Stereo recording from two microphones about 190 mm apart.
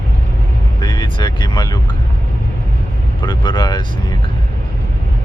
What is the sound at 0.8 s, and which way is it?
Vehicle, 20° left (ahead or behind).